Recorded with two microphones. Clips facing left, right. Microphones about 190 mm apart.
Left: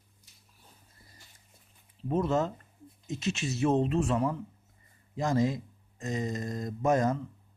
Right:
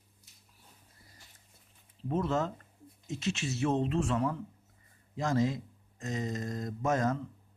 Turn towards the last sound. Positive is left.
turn(degrees=15)  # may be behind; listen again after turning